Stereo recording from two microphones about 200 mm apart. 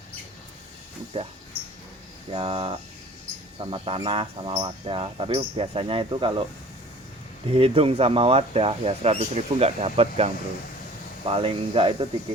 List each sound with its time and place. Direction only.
1.1 s speech: 25° right (ahead or behind)
2.3 s speech: 25° right (ahead or behind)
7.5 s speech: 30° right (ahead or behind)